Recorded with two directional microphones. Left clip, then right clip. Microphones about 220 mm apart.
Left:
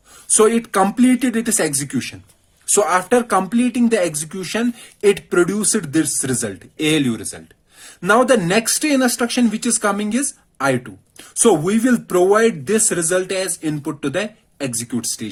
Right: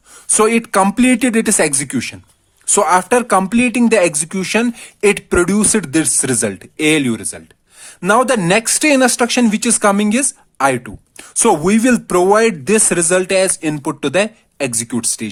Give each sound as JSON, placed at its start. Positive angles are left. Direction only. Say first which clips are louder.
{"t": 0.3, "sound": "speech", "louder": "right 1 dB", "side_deg": -40}